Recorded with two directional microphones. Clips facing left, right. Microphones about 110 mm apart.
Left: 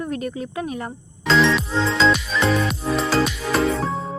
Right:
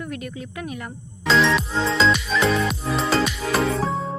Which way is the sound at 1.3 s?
Centre (ahead or behind).